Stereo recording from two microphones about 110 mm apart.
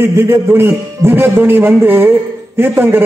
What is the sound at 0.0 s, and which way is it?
A man's voice, 20° right (ahead or behind).